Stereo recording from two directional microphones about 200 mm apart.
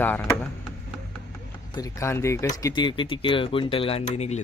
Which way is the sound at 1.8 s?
15° left (ahead or behind).